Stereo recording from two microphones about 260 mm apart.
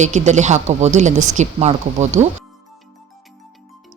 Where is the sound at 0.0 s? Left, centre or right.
Right.